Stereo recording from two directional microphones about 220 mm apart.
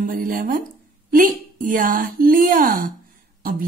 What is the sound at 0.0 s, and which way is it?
Speech, 40° right (ahead or behind).